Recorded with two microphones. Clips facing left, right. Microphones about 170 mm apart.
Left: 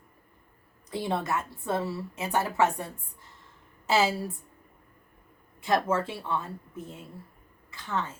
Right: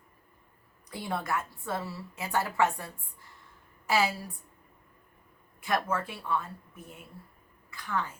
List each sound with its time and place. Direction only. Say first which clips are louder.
0.9 s a woman's voice: left 4 dB; 25° left (ahead or behind)
5.5 s a woman's voice: left 4 dB; 25° left (ahead or behind)